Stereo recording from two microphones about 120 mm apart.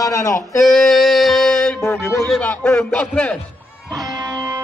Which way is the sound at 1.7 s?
20° left (ahead or behind).